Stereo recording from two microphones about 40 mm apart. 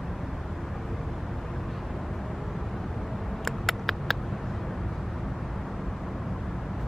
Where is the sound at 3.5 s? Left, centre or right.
Centre.